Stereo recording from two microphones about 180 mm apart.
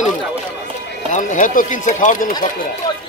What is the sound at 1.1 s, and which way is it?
Speech, 45° left (ahead or behind).